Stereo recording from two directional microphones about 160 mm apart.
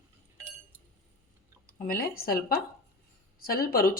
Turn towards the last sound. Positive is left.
turn(degrees=65)  # may be behind; listen again after turning